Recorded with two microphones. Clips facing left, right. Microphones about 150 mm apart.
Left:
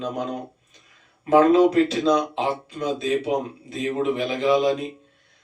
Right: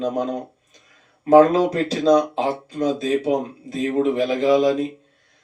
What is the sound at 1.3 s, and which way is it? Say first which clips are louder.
Speech: right 2 dB; 40° right (ahead or behind).